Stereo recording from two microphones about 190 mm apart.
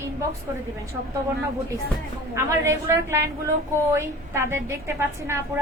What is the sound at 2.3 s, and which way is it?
A woman's voice, 15° right (ahead or behind).